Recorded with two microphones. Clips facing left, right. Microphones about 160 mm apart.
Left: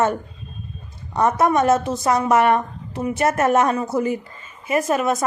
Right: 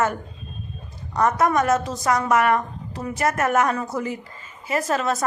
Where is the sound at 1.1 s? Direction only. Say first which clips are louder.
Left 2 dB; 25° left (ahead or behind).